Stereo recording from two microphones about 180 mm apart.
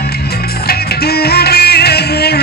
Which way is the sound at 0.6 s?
60° left (ahead or behind).